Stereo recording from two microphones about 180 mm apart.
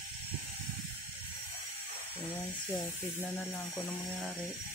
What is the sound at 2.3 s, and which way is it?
Speech, 10° left (ahead or behind).